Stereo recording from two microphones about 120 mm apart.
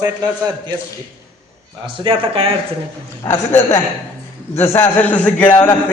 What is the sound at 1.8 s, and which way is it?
Speech, 45° right (ahead or behind).